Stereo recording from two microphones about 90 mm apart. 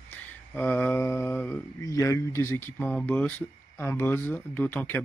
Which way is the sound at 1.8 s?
35° left (ahead or behind).